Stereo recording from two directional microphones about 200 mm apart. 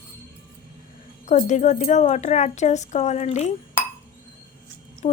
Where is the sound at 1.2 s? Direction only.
35° left (ahead or behind).